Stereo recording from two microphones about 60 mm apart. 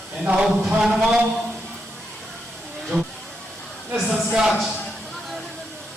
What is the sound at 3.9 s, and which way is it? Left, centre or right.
Speech, centre.